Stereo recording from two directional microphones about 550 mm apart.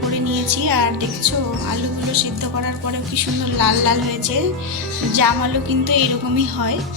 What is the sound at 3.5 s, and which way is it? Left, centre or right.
Speech, right.